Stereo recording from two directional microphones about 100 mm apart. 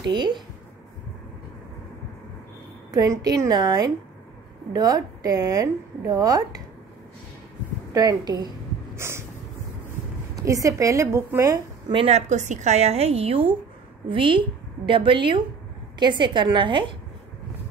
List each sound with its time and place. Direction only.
0.0 s a woman's voice: 50° right (ahead or behind)
2.9 s a woman's voice: 40° right (ahead or behind)
7.9 s a woman's voice: 40° right (ahead or behind)
8.9 s snort: 25° right (ahead or behind)
10.4 s a woman's voice: 35° right (ahead or behind)
11.9 s a woman's voice: 80° right
12.7 s a woman's voice: 90° right; by 16.9 s 55° right (ahead or behind)